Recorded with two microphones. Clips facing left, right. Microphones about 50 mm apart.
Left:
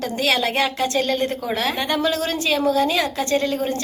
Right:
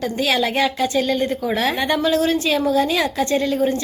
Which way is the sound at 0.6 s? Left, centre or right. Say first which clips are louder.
Right 2 dB; centre.